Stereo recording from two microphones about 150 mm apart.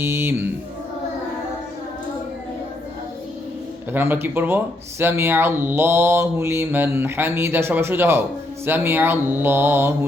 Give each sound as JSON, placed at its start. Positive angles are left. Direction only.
{"t": 0.0, "sound": "speech", "side_deg": -15}
{"t": 3.9, "sound": "speech", "side_deg": -15}